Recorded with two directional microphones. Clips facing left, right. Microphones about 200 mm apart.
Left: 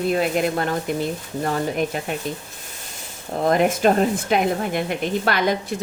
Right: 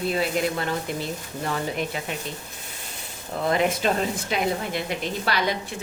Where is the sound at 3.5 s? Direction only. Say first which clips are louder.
Left 5 dB; 50° left (ahead or behind).